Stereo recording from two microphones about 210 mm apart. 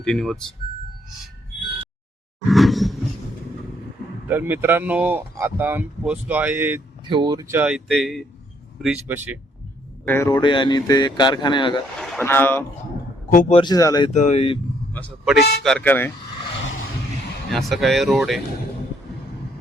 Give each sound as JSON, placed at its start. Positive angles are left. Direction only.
{"t": 0.0, "sound": "speech", "side_deg": 0}
{"t": 2.5, "sound": "speech", "side_deg": 0}
{"t": 4.3, "sound": "speech", "side_deg": -10}
{"t": 7.1, "sound": "speech", "side_deg": -20}
{"t": 7.6, "sound": "speech", "side_deg": 0}
{"t": 10.1, "sound": "speech", "side_deg": 15}
{"t": 11.9, "sound": "speech", "side_deg": 5}
{"t": 13.5, "sound": "speech", "side_deg": 20}
{"t": 14.1, "sound": "speech", "side_deg": 35}
{"t": 14.9, "sound": "speech", "side_deg": 0}
{"t": 17.5, "sound": "speech", "side_deg": 0}